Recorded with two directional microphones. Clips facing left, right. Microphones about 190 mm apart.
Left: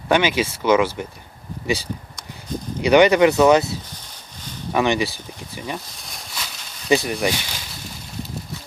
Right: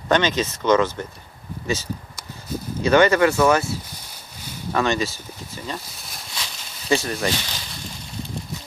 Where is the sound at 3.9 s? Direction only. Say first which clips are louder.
Even; 10° right (ahead or behind).